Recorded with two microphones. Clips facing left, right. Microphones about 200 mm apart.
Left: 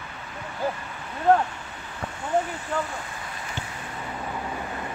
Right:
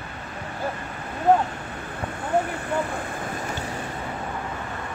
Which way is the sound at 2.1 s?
60° right (ahead or behind).